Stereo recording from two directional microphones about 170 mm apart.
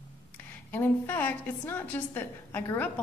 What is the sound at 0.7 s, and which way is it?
A woman's voice, 10° left (ahead or behind).